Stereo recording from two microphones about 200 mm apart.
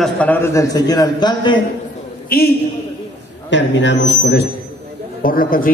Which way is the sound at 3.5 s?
65° left (ahead or behind).